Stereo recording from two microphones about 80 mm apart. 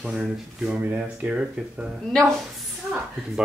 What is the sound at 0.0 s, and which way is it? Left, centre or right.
Speech, centre.